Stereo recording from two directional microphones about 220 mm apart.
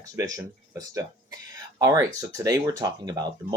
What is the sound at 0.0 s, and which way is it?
Speech, 15° right (ahead or behind).